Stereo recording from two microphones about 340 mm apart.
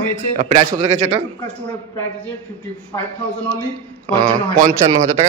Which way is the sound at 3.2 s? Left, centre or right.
Centre.